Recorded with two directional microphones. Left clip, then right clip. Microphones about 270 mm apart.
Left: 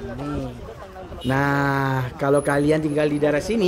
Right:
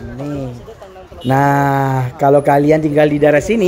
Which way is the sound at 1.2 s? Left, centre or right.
Centre.